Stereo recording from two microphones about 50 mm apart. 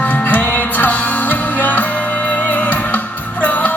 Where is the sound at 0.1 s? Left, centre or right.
Left.